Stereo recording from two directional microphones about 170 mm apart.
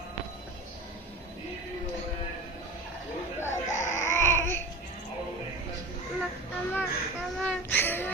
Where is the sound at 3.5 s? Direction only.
45° left (ahead or behind).